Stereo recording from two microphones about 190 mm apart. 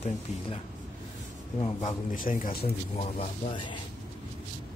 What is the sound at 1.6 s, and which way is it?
Speech, 35° left (ahead or behind).